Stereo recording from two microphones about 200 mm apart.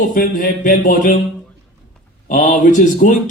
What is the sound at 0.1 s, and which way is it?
Speech, 45° left (ahead or behind).